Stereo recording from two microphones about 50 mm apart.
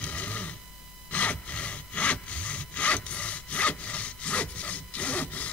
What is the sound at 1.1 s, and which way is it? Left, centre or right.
Sawing, left.